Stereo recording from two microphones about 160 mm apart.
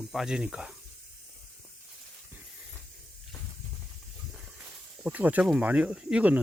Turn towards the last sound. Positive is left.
turn(degrees=-10)  # may be behind; listen again after turning